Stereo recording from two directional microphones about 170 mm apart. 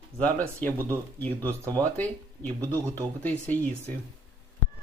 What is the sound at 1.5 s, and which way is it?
Speech, 20° right (ahead or behind).